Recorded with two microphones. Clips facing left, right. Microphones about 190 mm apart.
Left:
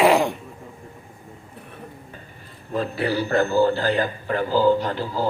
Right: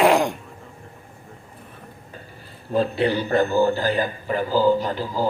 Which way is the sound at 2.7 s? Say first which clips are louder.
Right 3 dB; 25° right (ahead or behind).